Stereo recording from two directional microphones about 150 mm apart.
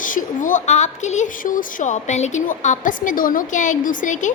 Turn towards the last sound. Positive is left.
turn(degrees=55)  # may be behind; listen again after turning